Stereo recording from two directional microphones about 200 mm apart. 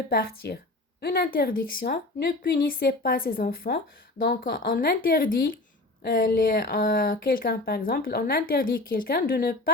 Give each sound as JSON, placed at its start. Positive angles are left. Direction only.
{"t": 0.1, "sound": "speech", "side_deg": 50}